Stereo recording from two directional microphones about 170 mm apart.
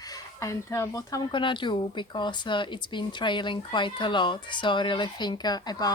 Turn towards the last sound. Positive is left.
turn(degrees=25)  # may be behind; listen again after turning